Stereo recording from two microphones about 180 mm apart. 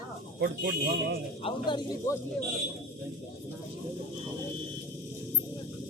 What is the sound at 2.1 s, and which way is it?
Speech, 15° left (ahead or behind).